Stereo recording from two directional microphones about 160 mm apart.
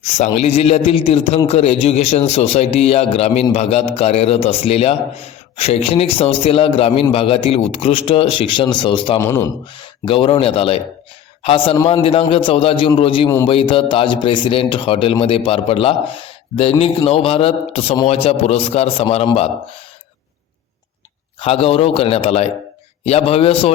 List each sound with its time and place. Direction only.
0.3 s a man's voice: 40° left (ahead or behind)
9.1 s speech: 20° left (ahead or behind)
9.7 s a man's voice: 30° left (ahead or behind)
21.3 s a man's voice: 35° left (ahead or behind)